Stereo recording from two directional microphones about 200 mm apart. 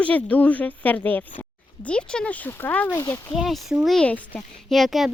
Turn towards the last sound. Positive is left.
turn(degrees=0)  # may be behind; listen again after turning